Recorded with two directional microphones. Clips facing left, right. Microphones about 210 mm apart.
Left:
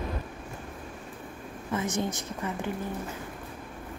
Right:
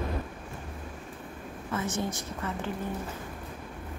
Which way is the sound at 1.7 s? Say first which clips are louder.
Left 2 dB; 15° left (ahead or behind).